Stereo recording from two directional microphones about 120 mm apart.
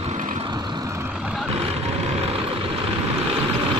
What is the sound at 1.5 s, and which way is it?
Vehicle, 55° right (ahead or behind).